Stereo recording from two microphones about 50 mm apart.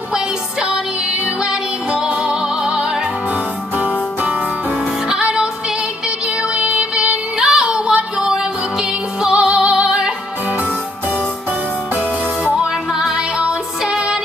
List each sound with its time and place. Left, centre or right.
0.1 s music: centre
3.7 s music: right
5.1 s music: centre
6.5 s music: right
12.9 s music: centre